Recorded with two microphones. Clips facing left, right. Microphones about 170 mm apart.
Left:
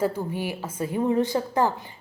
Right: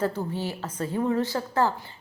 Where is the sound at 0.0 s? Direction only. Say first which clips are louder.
Left 2 dB; 10° left (ahead or behind).